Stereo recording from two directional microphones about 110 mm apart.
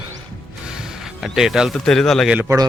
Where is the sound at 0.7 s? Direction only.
5° right (ahead or behind).